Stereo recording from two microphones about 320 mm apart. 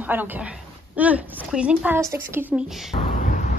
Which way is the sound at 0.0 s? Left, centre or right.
Centre.